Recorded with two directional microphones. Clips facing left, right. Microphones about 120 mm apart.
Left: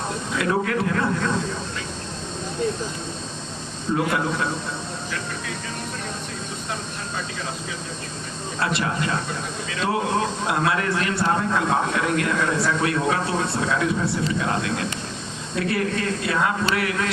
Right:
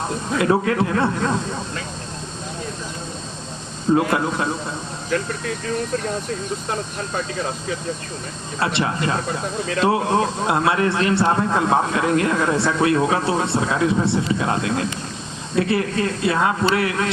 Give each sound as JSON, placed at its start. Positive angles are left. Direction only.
{"t": 0.3, "sound": "speech", "side_deg": -25}
{"t": 3.9, "sound": "speech", "side_deg": -30}
{"t": 8.6, "sound": "speech", "side_deg": -25}